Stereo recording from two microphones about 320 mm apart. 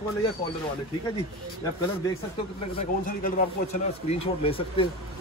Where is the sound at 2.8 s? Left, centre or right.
Left.